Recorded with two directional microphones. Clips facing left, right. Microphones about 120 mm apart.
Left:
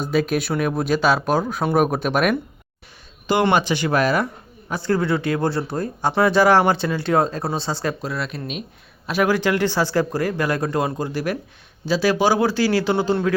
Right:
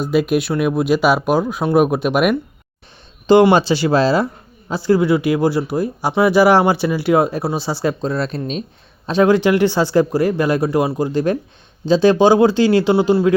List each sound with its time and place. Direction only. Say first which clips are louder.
0.0 s speech: right 4 dB; 5° right (ahead or behind)
3.8 s speech: right 4 dB; 25° right (ahead or behind)
4.7 s speech: right 6 dB; 15° right (ahead or behind)
8.0 s speech: right 7 dB; 30° right (ahead or behind)